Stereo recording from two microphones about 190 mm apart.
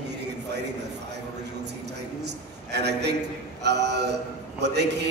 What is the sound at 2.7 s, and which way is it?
A man's voice, 60° right (ahead or behind).